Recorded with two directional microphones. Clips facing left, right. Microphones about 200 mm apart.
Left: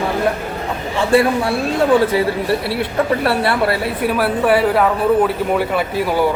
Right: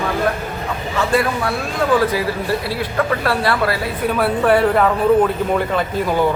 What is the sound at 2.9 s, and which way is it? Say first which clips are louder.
Speech: left 2 dB; 25° left (ahead or behind).